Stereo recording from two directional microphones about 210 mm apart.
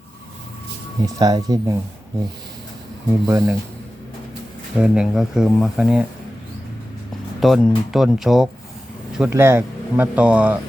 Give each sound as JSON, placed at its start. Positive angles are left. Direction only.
{"t": 1.0, "sound": "speech", "side_deg": -15}
{"t": 3.2, "sound": "speech", "side_deg": -15}
{"t": 4.8, "sound": "speech", "side_deg": -5}
{"t": 7.3, "sound": "speech", "side_deg": 0}